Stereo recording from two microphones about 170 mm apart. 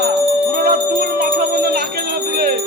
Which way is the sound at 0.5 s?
65° right (ahead or behind).